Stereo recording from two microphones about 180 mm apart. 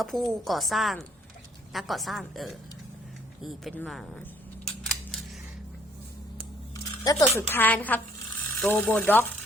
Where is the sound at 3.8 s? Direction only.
Centre (ahead or behind).